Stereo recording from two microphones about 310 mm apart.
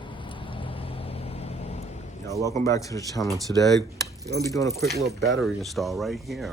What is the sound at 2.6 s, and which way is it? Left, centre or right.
Speech, centre.